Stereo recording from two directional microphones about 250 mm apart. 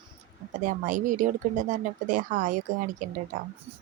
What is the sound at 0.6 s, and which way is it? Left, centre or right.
Speech, right.